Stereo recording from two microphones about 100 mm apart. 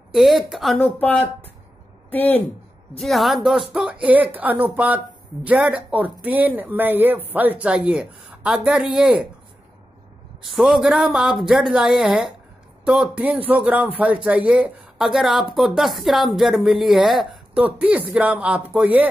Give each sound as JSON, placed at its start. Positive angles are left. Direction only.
{"t": 0.1, "sound": "speech", "side_deg": 0}
{"t": 0.7, "sound": "a woman's voice", "side_deg": 15}
{"t": 3.0, "sound": "speech", "side_deg": 0}
{"t": 10.4, "sound": "speech", "side_deg": 0}
{"t": 17.6, "sound": "speech", "side_deg": -15}